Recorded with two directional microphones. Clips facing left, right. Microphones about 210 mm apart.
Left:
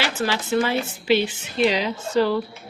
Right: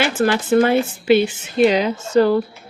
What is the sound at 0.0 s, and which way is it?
Speech, 50° right (ahead or behind).